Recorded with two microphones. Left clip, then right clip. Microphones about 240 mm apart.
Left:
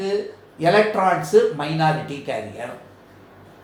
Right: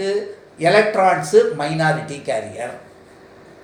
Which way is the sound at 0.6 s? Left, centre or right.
Left.